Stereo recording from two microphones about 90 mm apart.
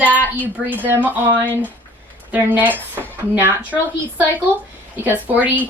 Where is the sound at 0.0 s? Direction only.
20° right (ahead or behind).